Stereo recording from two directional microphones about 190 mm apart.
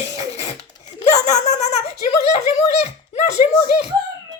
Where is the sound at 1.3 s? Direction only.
35° left (ahead or behind).